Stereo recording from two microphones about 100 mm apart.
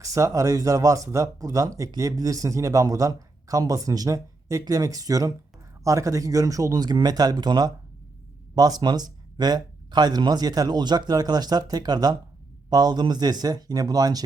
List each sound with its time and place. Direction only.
0.0 s speech: 35° right (ahead or behind)